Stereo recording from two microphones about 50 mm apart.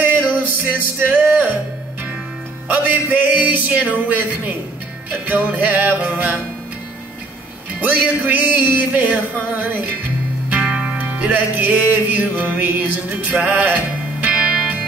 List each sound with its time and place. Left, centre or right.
0.0 s music: right
2.7 s music: right
7.8 s music: right
10.7 s music: centre
11.1 s music: right